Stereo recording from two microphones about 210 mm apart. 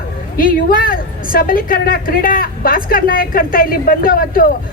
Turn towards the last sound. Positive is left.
turn(degrees=40)  # may be behind; listen again after turning